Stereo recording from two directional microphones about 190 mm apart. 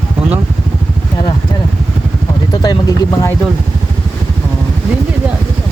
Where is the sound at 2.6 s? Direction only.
20° left (ahead or behind).